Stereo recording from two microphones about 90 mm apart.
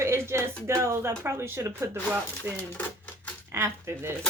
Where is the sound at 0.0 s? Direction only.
30° right (ahead or behind).